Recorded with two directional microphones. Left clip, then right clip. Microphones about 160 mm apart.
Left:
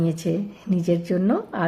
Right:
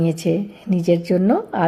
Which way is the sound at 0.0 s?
20° right (ahead or behind).